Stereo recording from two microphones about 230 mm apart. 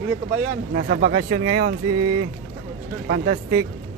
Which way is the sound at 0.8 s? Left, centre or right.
Right.